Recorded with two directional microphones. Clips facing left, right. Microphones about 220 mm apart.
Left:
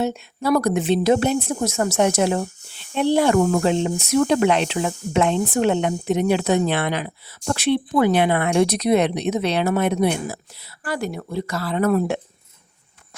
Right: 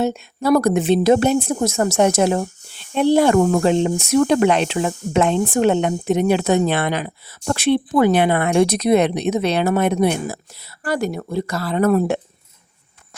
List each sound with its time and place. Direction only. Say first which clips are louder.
0.0 s speech: right 3 dB; 45° right (ahead or behind)